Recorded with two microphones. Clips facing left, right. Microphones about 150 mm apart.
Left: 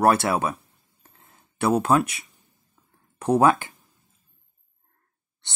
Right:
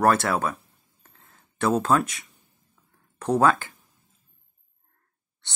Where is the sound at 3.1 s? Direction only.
15° left (ahead or behind).